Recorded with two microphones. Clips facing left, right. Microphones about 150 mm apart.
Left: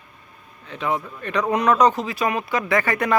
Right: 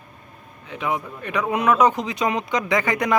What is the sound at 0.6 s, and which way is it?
Speech, 15° right (ahead or behind).